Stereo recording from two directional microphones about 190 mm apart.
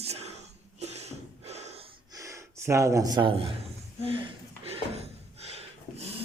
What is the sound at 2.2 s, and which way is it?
Speech, 15° right (ahead or behind).